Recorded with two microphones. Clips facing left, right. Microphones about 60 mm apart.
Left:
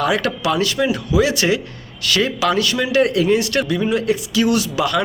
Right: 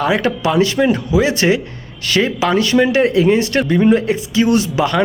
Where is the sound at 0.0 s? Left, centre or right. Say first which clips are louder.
Right 3 dB; right.